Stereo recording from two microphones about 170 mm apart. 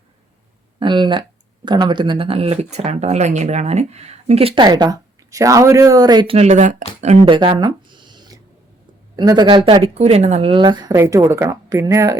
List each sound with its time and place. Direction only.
0.8 s speech: 25° right (ahead or behind)
6.3 s speech: 40° right (ahead or behind)
7.3 s a sound: 30° right (ahead or behind)
9.1 s a woman's voice: 25° right (ahead or behind)